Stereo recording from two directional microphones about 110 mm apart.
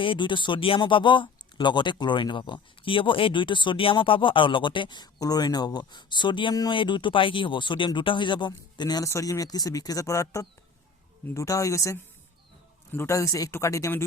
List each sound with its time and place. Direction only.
0.0 s speech: 50° left (ahead or behind)
6.5 s speech: 35° left (ahead or behind)
6.7 s speech: 45° left (ahead or behind)
9.0 s speech: 30° left (ahead or behind)